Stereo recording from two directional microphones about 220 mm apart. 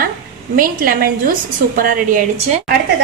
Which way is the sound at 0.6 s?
40° right (ahead or behind).